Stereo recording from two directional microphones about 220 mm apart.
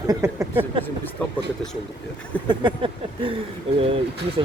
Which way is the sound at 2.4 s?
20° right (ahead or behind).